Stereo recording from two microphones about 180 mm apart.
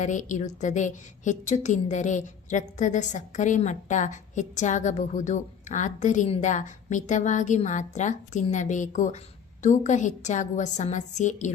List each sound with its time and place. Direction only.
0.0 s a woman's voice: 45° left (ahead or behind)